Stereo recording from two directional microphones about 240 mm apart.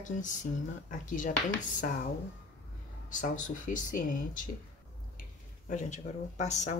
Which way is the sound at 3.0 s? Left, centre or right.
Left.